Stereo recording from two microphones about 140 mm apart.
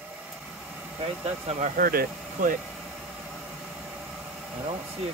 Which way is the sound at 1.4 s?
45° right (ahead or behind).